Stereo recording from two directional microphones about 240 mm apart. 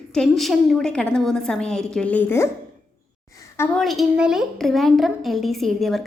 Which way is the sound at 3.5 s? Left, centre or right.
Centre.